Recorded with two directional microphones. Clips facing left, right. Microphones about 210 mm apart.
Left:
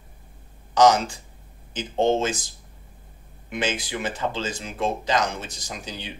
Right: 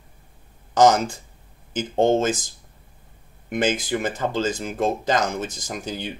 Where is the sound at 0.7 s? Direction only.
50° right (ahead or behind).